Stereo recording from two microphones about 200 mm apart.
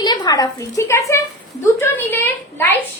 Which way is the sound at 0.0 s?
20° left (ahead or behind).